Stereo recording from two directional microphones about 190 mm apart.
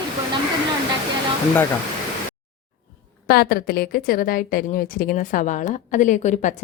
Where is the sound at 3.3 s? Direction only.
50° left (ahead or behind).